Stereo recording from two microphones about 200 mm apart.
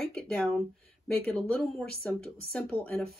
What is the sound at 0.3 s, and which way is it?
Speech, centre (ahead or behind).